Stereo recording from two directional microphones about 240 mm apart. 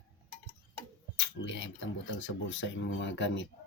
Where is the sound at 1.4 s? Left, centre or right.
Left.